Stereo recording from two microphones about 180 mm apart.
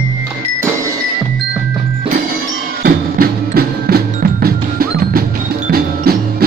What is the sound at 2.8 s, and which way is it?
Percussion, 55° right (ahead or behind).